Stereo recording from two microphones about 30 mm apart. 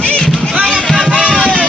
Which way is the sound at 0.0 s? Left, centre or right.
Left.